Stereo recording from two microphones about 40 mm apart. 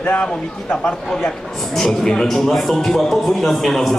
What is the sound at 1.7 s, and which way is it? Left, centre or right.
A man's voice, centre.